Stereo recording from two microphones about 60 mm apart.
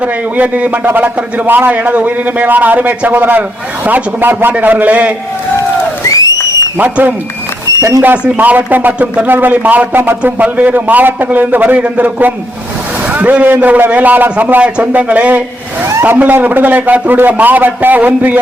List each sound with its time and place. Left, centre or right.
0.0 s a man's voice: right
6.1 s a sound: left
6.7 s a man's voice: right
7.8 s speech: right
8.4 s a man's voice: right